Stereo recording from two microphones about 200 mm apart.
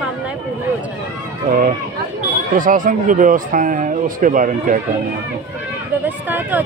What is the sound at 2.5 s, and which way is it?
Speech, 40° right (ahead or behind).